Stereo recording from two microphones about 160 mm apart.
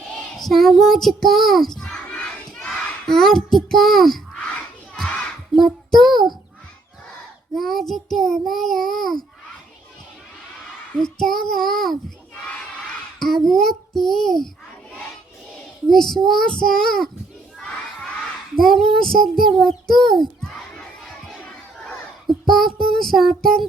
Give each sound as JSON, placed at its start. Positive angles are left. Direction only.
{"t": 0.3, "sound": "child singing", "side_deg": 0}
{"t": 5.5, "sound": "child singing", "side_deg": 0}
{"t": 6.1, "sound": "a child's voice", "side_deg": -25}
{"t": 7.5, "sound": "child singing", "side_deg": 0}
{"t": 11.0, "sound": "child singing", "side_deg": 5}
{"t": 11.5, "sound": "a child's voice", "side_deg": 5}
{"t": 13.1, "sound": "child singing", "side_deg": 0}
{"t": 15.9, "sound": "child singing", "side_deg": 0}
{"t": 18.6, "sound": "child singing", "side_deg": 0}